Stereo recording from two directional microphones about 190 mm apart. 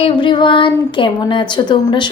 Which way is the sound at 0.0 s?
25° left (ahead or behind).